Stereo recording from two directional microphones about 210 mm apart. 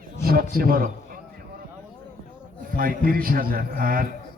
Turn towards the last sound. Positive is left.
turn(degrees=-40)  # may be behind; listen again after turning